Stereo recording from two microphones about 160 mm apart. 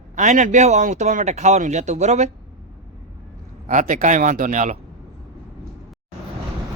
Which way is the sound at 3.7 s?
55° right (ahead or behind).